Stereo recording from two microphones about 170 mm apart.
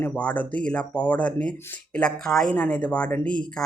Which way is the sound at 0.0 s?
5° left (ahead or behind).